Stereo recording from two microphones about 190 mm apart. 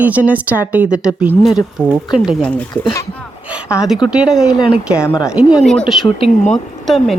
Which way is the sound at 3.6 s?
5° right (ahead or behind).